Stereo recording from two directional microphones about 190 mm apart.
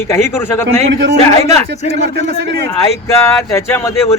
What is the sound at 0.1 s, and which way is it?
Speech, 15° left (ahead or behind).